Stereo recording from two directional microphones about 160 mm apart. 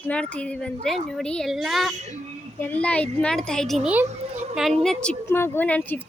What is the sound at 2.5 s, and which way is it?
A woman's voice, 10° left (ahead or behind).